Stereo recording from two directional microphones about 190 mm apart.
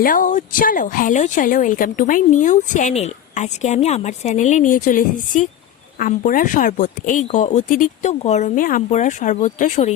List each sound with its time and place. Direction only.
0.0 s speech: 45° left (ahead or behind)